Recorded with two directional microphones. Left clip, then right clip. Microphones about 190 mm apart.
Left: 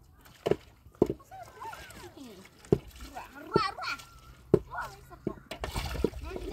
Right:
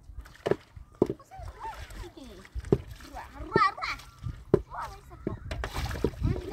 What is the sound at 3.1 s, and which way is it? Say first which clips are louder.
Splash: right 2 dB; 30° right (ahead or behind).